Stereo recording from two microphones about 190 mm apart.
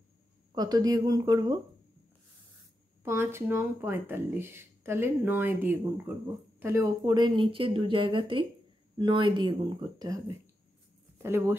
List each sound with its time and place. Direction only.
0.6 s speech: 20° right (ahead or behind)
3.0 s speech: 10° right (ahead or behind)